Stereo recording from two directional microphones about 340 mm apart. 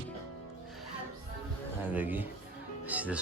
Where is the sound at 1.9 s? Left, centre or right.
Centre.